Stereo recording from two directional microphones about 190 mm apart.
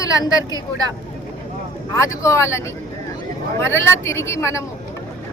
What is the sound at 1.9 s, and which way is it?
Speech, 15° left (ahead or behind).